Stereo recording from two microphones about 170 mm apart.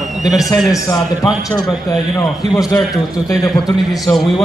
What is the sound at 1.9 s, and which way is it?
Speech, 20° left (ahead or behind).